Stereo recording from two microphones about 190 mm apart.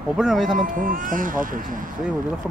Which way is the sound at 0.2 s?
Centre (ahead or behind).